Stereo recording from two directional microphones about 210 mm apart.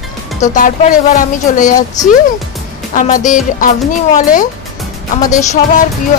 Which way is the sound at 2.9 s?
40° left (ahead or behind).